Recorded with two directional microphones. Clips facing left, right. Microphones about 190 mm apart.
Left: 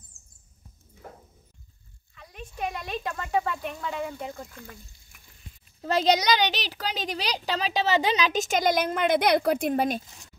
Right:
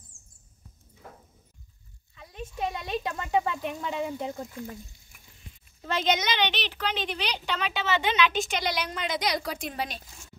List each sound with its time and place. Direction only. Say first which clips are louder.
0.1 s mouse: right 2 dB; 50° right (ahead or behind)
2.1 s speech: right 2 dB; 25° right (ahead or behind)
5.8 s speech: left 4 dB; 35° left (ahead or behind)